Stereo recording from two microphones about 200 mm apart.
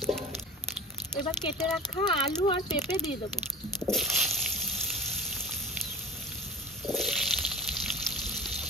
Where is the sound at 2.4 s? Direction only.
25° left (ahead or behind).